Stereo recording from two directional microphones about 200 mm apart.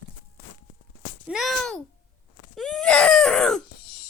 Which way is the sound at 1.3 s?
Centre (ahead or behind).